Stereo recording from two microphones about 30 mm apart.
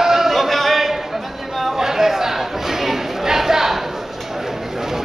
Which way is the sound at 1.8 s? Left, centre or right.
Centre.